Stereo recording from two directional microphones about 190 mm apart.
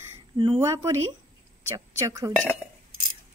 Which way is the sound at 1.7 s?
15° right (ahead or behind).